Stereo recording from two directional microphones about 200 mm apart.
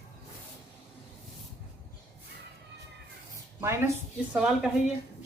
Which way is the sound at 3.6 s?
15° right (ahead or behind).